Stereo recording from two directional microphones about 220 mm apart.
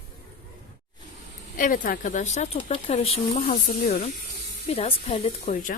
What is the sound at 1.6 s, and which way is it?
Speech, 40° left (ahead or behind).